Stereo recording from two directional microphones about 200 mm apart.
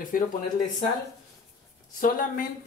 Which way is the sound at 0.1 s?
45° left (ahead or behind).